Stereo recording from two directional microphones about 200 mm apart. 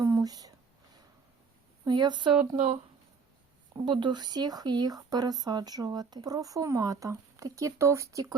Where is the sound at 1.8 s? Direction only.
20° right (ahead or behind).